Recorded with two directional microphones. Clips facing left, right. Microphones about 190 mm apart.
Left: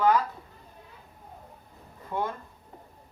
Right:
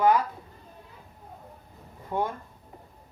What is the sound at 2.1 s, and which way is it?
Speech, 20° right (ahead or behind).